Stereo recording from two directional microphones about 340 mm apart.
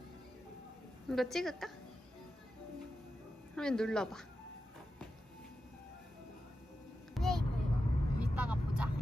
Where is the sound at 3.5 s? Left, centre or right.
Centre.